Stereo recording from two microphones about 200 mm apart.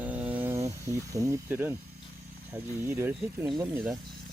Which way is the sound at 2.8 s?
10° right (ahead or behind).